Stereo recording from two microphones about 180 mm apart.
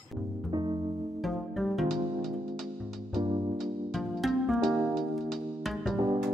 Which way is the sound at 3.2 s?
25° right (ahead or behind).